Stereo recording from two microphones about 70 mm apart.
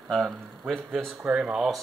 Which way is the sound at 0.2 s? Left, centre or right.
Centre.